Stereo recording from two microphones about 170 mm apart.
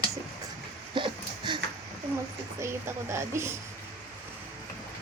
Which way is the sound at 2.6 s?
15° right (ahead or behind).